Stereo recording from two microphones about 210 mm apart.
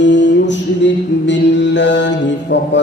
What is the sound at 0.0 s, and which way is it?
Mantra, 60° left (ahead or behind).